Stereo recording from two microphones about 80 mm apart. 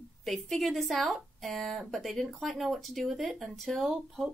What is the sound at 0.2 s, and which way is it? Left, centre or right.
Speech, centre.